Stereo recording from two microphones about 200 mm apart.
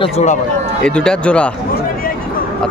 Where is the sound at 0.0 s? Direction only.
35° left (ahead or behind).